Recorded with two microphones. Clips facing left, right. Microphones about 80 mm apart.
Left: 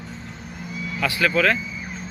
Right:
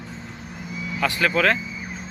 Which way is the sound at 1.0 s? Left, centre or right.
Right.